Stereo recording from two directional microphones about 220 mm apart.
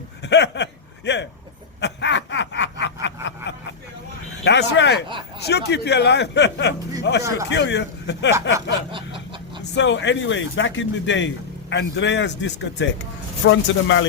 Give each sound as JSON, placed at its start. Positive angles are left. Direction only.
{"t": 0.2, "sound": "a sound", "side_deg": 50}
{"t": 1.8, "sound": "snicker", "side_deg": 55}
{"t": 4.4, "sound": "speech", "side_deg": 50}
{"t": 8.9, "sound": "snicker", "side_deg": -25}
{"t": 9.7, "sound": "a man's voice", "side_deg": 55}